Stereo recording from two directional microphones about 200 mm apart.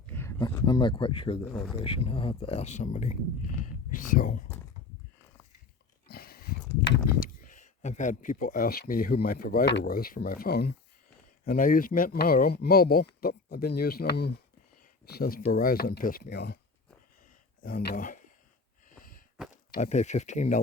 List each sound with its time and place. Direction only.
0.1 s speech: 15° left (ahead or behind)
1.4 s speech: centre (ahead or behind)
1.7 s speech: 25° left (ahead or behind); by 4.4 s 45° left (ahead or behind)
6.1 s a sound: 50° left (ahead or behind)
6.8 s horse: 60° left (ahead or behind)
7.4 s speech: 40° left (ahead or behind); by 16.6 s 55° left (ahead or behind)
17.6 s speech: 50° left (ahead or behind)
18.9 s a sound: 45° left (ahead or behind)
19.8 s speech: 35° left (ahead or behind)